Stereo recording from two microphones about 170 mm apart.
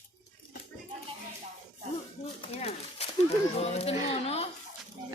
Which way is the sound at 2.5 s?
35° left (ahead or behind).